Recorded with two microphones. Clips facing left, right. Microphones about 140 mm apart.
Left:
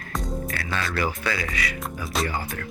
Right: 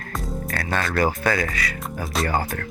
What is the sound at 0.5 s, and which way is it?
Speech, 45° right (ahead or behind).